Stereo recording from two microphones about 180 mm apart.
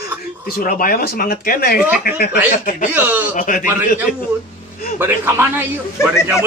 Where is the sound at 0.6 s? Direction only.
55° left (ahead or behind).